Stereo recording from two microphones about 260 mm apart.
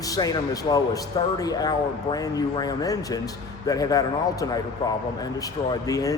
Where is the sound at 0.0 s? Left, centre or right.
Centre.